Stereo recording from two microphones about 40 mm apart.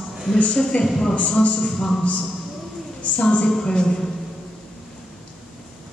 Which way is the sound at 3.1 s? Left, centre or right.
Left.